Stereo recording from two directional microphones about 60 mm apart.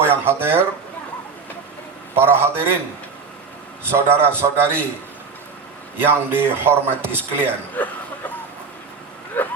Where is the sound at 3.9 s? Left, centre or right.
Right.